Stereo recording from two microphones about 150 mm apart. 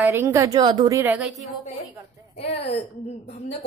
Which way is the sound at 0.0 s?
15° right (ahead or behind).